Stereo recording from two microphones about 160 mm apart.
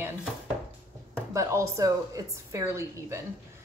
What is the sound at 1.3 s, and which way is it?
A woman's voice, 20° right (ahead or behind).